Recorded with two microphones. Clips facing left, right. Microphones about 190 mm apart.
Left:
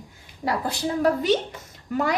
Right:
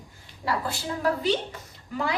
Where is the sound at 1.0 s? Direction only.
45° left (ahead or behind).